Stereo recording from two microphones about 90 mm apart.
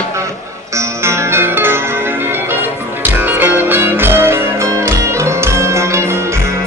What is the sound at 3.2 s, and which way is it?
Music, 20° right (ahead or behind).